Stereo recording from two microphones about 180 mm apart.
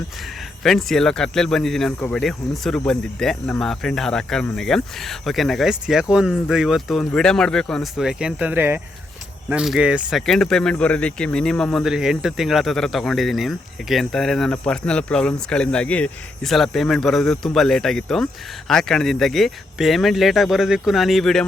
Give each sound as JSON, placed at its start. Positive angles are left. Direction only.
{"t": 0.6, "sound": "speech", "side_deg": 0}